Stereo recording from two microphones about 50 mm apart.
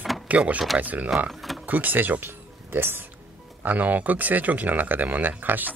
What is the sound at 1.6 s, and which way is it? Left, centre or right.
Speech, right.